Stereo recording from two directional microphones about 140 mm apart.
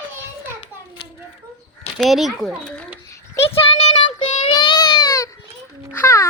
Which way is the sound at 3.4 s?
40° left (ahead or behind).